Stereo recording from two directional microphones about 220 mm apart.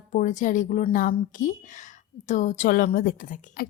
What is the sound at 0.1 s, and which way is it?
A woman's voice, 35° left (ahead or behind).